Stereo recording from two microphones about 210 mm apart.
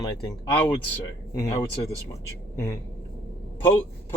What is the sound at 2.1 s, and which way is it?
Speech, 15° left (ahead or behind).